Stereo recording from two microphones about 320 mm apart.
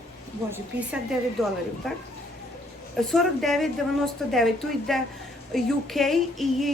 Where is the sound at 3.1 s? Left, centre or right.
Centre.